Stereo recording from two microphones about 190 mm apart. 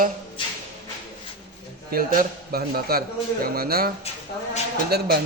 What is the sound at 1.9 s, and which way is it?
A man's voice, 50° right (ahead or behind).